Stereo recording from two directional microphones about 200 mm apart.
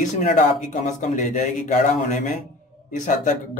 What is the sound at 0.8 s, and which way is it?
Speech, 35° left (ahead or behind).